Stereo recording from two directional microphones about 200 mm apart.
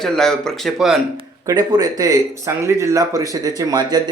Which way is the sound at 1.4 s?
20° right (ahead or behind).